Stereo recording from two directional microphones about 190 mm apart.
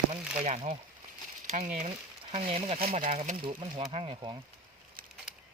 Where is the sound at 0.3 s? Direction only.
40° right (ahead or behind).